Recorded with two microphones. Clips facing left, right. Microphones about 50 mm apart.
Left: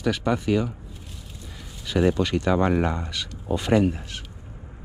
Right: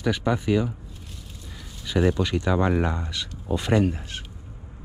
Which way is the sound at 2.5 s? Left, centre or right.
Left.